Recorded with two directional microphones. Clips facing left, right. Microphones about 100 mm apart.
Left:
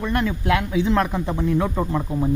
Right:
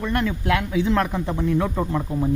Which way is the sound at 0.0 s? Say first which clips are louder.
Left 1 dB; 20° left (ahead or behind).